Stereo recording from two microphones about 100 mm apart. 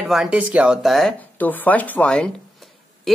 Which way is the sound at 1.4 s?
15° left (ahead or behind).